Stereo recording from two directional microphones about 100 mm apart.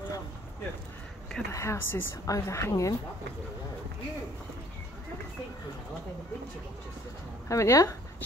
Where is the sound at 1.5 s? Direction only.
30° left (ahead or behind).